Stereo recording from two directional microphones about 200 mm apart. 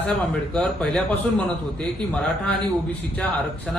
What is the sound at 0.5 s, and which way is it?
Speech, 5° left (ahead or behind).